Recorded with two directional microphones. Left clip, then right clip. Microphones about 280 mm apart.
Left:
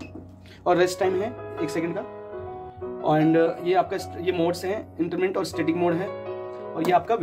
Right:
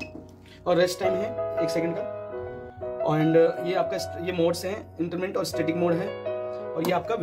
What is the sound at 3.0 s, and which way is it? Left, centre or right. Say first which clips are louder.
Speech: left 1 dB; centre.